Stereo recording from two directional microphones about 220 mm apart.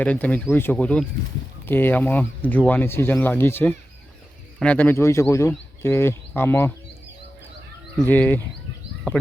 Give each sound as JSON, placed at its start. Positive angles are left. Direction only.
{"t": 0.0, "sound": "speech", "side_deg": 5}
{"t": 7.9, "sound": "speech", "side_deg": 5}